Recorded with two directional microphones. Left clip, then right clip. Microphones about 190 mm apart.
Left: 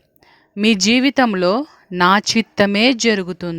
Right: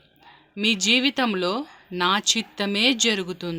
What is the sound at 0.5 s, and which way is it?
Speech, 45° left (ahead or behind).